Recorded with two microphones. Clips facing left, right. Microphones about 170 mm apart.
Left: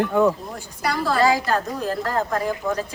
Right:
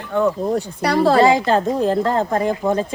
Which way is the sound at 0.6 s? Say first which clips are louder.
Right 8 dB; 70° right (ahead or behind).